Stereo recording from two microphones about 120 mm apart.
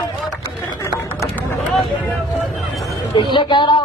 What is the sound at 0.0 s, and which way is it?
Run, 35° left (ahead or behind).